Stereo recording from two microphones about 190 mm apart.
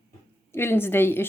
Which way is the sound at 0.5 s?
10° left (ahead or behind).